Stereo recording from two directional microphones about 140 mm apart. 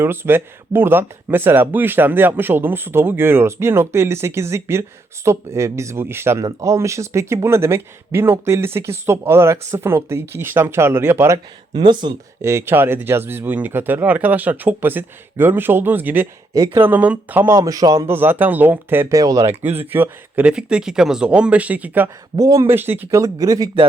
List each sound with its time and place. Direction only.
0.0 s speech: 15° right (ahead or behind)
11.7 s speech: 35° right (ahead or behind)
12.4 s speech: 20° right (ahead or behind)
17.6 s speech: 30° right (ahead or behind)
19.6 s speech: 45° right (ahead or behind)
19.9 s speech: 15° right (ahead or behind)
22.4 s speech: 25° right (ahead or behind)